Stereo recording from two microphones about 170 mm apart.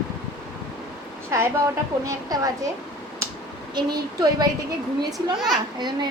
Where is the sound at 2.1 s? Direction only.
20° right (ahead or behind).